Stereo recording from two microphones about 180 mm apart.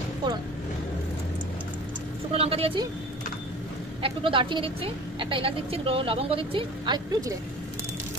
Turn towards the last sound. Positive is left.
turn(degrees=-25)  # may be behind; listen again after turning